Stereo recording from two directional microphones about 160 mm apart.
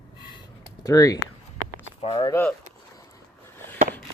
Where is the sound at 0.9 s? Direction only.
20° left (ahead or behind).